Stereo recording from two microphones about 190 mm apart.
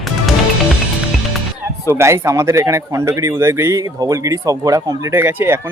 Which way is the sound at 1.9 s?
15° right (ahead or behind).